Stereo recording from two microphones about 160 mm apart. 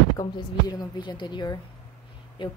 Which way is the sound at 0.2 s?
25° left (ahead or behind).